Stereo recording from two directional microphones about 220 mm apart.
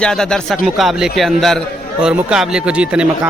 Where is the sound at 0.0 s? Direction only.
5° left (ahead or behind).